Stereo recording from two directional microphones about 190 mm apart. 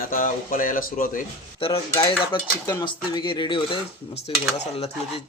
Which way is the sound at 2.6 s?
15° left (ahead or behind).